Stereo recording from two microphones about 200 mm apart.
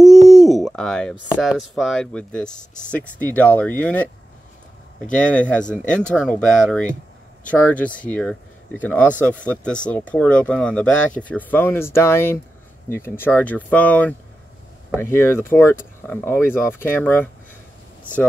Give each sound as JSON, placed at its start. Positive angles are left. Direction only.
{"t": 0.0, "sound": "hoot", "side_deg": 0}
{"t": 1.4, "sound": "speech", "side_deg": 0}
{"t": 5.1, "sound": "speech", "side_deg": 5}